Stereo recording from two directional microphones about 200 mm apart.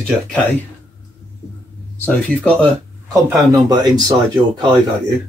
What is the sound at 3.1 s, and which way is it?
Speech, 15° right (ahead or behind).